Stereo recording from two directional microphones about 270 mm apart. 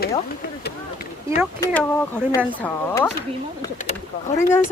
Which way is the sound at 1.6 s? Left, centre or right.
Centre.